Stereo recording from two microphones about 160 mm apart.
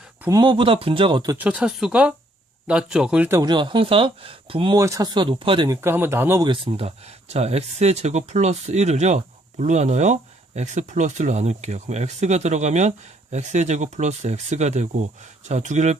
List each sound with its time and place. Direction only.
0.2 s speech: 25° right (ahead or behind)
1.4 s speech: 10° right (ahead or behind)
3.5 s speech: 30° right (ahead or behind)
4.8 s speech: 20° right (ahead or behind)
5.6 s speech: 20° right (ahead or behind)
6.4 s speech: 30° right (ahead or behind); by 16.0 s 45° right (ahead or behind)